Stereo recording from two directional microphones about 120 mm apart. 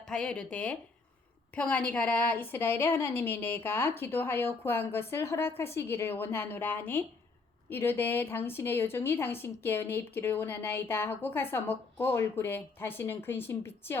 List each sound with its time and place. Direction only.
0.0 s a woman's voice: 5° left (ahead or behind)